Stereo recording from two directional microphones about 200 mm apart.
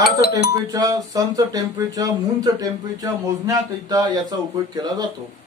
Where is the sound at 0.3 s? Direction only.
20° right (ahead or behind).